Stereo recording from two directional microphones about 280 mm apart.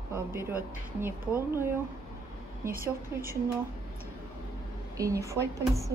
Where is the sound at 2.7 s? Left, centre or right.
Right.